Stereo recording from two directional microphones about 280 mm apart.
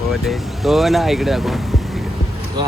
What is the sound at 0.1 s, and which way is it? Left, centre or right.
Speech, centre.